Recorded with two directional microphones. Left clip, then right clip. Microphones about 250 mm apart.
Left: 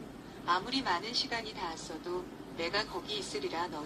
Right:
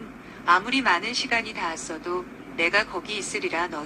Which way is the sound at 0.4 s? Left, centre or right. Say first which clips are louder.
Right 11 dB; right.